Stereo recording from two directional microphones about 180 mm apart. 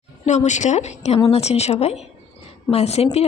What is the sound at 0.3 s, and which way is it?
A woman's voice, 40° left (ahead or behind).